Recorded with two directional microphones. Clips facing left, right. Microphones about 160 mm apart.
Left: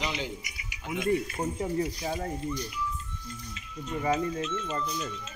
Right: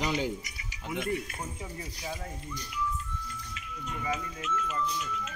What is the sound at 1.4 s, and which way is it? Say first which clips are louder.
Speech: left 11 dB; 50° left (ahead or behind).